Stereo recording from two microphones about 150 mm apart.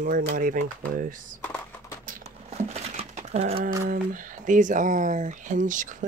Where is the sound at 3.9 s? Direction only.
65° right (ahead or behind).